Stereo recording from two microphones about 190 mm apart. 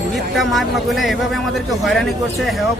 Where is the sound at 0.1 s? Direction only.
Centre (ahead or behind).